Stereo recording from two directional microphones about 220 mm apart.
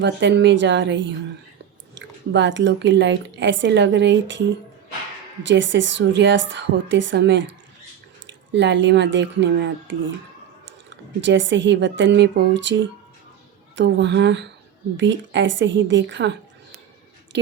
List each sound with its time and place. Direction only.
0.0 s speech: 50° right (ahead or behind)
5.5 s speech: 55° right (ahead or behind)
17.3 s speech: 55° right (ahead or behind)